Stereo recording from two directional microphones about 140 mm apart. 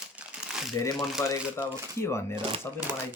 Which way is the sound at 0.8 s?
20° left (ahead or behind).